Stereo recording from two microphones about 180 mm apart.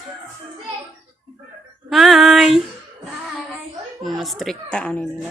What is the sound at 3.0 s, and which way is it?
Child singing, centre (ahead or behind).